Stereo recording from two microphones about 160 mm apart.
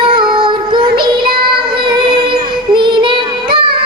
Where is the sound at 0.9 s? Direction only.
30° right (ahead or behind).